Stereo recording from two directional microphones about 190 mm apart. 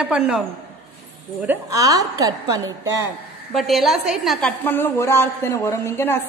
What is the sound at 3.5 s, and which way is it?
A woman's voice, centre (ahead or behind).